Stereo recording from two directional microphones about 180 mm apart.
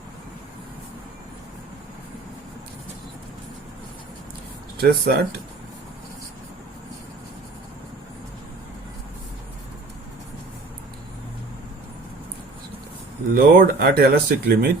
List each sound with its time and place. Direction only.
4.9 s speech: 65° right (ahead or behind)
13.3 s speech: 55° right (ahead or behind)